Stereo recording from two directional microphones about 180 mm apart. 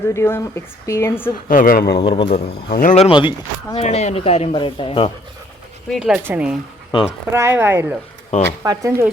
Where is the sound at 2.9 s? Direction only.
30° left (ahead or behind).